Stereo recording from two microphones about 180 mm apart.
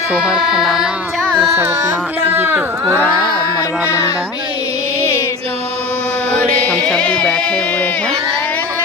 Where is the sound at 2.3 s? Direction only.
10° right (ahead or behind).